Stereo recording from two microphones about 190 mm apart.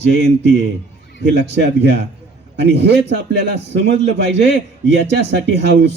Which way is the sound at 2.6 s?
65° right (ahead or behind).